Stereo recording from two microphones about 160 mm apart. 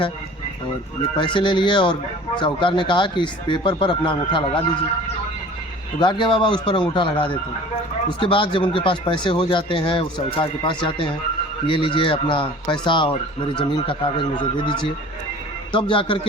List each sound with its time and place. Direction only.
1.1 s speech: 30° left (ahead or behind)
6.0 s speech: 30° left (ahead or behind)